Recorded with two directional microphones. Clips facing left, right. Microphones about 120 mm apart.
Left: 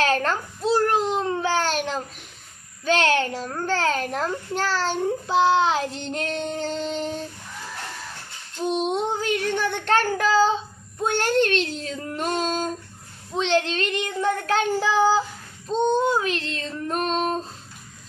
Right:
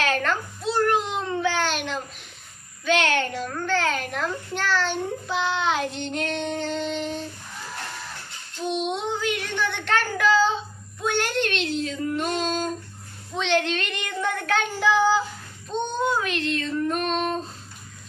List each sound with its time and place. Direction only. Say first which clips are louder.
0.0 s babbling: left 2 dB; 35° left (ahead or behind)
2.8 s a child's voice: left 2 dB; 35° left (ahead or behind)
8.6 s child singing: left 3 dB; 40° left (ahead or behind)
15.9 s a sound: left 2 dB; 30° left (ahead or behind)